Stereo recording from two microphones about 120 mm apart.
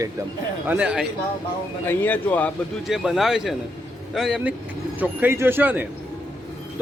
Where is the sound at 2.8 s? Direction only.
5° right (ahead or behind).